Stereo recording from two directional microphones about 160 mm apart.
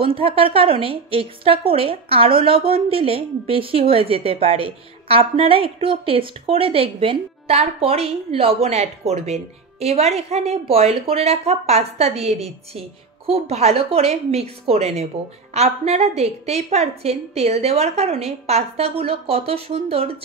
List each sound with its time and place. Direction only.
0.0 s speech: 35° right (ahead or behind)